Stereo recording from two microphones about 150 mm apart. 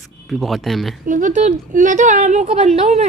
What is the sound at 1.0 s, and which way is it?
A woman's voice, 60° right (ahead or behind).